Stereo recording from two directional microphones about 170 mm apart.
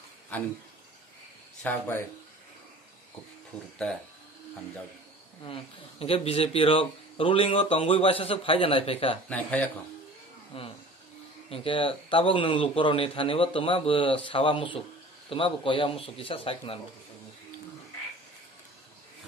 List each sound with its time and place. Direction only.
1.6 s speech: 10° left (ahead or behind)
5.4 s speech: 35° left (ahead or behind)
9.3 s speech: 10° left (ahead or behind)
10.5 s speech: 35° left (ahead or behind)